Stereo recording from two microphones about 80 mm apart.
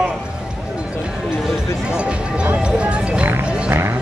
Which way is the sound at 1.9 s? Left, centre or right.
Centre.